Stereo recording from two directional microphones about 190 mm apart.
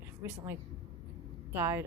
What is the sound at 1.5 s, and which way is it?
Speech, 10° right (ahead or behind).